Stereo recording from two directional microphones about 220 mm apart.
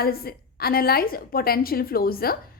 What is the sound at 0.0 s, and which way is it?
A woman's voice, 45° left (ahead or behind).